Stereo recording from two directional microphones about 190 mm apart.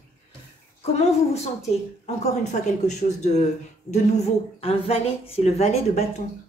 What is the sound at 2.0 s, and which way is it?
Speech, 35° left (ahead or behind).